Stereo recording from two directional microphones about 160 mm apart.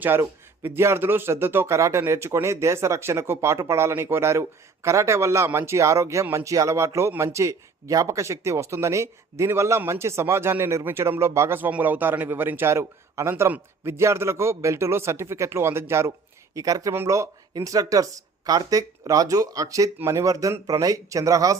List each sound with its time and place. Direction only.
0.0 s speech: 15° right (ahead or behind)